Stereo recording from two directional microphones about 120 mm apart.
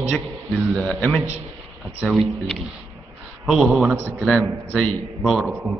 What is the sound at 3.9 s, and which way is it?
Speech, 20° right (ahead or behind).